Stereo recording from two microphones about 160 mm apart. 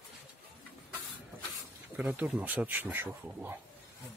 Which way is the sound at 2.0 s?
10° right (ahead or behind).